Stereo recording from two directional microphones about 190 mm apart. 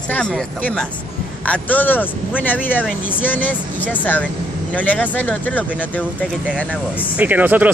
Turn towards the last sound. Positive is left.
turn(degrees=-10)  # may be behind; listen again after turning